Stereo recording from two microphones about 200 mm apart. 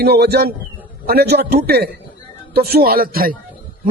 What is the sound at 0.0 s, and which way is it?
A man's voice, 55° right (ahead or behind).